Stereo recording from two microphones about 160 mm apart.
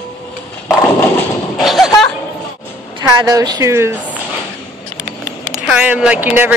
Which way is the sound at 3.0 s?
20° right (ahead or behind).